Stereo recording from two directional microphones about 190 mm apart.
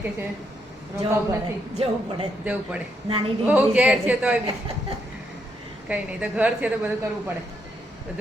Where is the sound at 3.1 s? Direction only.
25° right (ahead or behind).